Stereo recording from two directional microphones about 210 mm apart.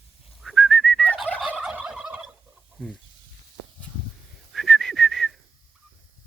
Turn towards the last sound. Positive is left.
turn(degrees=0)  # may be behind; listen again after turning